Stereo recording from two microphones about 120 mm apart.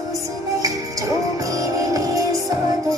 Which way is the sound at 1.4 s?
30° right (ahead or behind).